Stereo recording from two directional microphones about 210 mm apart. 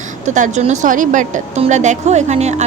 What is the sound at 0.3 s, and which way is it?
A woman's voice, 35° right (ahead or behind).